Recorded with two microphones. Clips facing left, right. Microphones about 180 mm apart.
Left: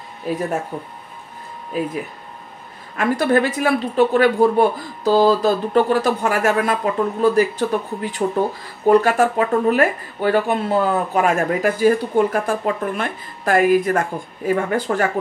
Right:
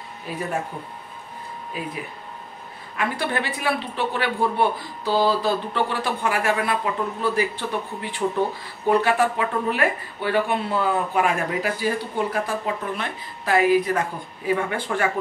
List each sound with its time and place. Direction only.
3.0 s speech: 45° left (ahead or behind)